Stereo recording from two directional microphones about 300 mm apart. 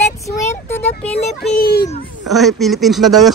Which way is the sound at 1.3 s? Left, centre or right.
Left.